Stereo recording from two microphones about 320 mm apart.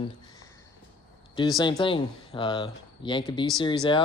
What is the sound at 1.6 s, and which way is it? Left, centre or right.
Speech, centre.